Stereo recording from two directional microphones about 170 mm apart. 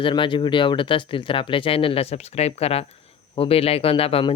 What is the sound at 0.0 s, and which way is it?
Speech, 30° left (ahead or behind).